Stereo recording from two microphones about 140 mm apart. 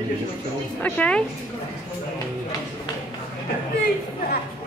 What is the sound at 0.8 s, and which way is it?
Speech, 10° left (ahead or behind).